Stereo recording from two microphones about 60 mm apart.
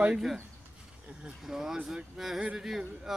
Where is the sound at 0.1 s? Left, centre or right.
Centre.